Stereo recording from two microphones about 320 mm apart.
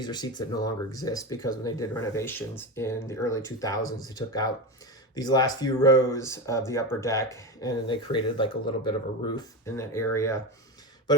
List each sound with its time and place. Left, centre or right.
0.0 s speech: centre